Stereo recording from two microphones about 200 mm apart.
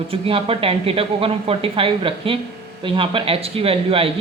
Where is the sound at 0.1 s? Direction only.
30° right (ahead or behind).